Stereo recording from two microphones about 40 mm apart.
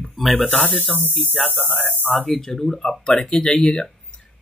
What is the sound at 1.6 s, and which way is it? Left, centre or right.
Speech, right.